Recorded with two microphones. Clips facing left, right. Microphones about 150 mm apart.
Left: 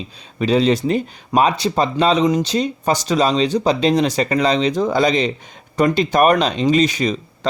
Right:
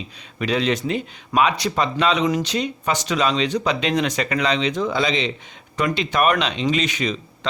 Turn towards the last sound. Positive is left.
turn(degrees=40)  # may be behind; listen again after turning